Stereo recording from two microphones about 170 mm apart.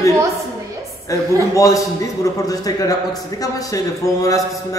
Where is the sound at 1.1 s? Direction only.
20° left (ahead or behind).